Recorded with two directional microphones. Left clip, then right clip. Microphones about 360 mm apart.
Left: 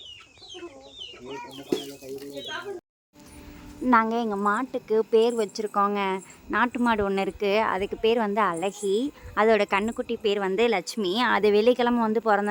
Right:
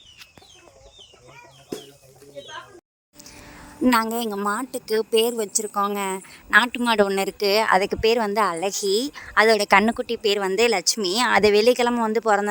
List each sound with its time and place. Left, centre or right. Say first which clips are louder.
4.0 s a woman's voice: even; centre
6.5 s a woman's voice: right 6 dB; right